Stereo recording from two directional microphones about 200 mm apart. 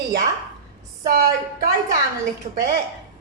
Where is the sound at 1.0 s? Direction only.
45° right (ahead or behind).